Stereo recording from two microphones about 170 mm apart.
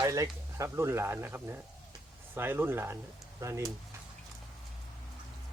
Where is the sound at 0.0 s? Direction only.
20° right (ahead or behind).